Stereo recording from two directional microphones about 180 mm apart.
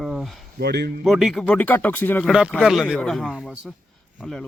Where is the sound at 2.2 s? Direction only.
5° right (ahead or behind).